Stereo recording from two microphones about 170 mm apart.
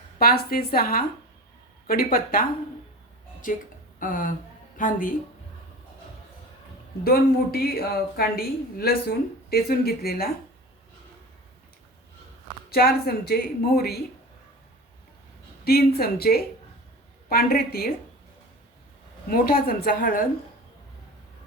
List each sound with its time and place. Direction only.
0.2 s a woman's voice: 60° left (ahead or behind)
7.0 s a woman's voice: 60° left (ahead or behind)
12.7 s a woman's voice: 65° left (ahead or behind)
15.6 s a woman's voice: 65° left (ahead or behind)
19.3 s a woman's voice: 60° left (ahead or behind)